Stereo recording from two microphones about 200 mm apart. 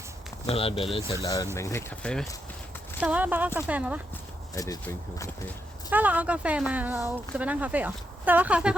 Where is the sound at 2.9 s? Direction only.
5° right (ahead or behind).